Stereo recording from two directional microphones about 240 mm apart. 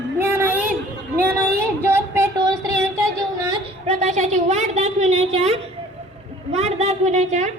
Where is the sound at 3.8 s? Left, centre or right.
Right.